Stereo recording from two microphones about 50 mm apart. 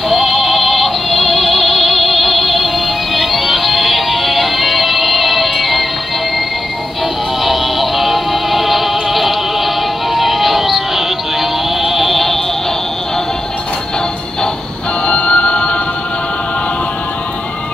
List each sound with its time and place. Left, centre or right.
0.1 s music: centre
7.4 s music: centre
15.0 s music: left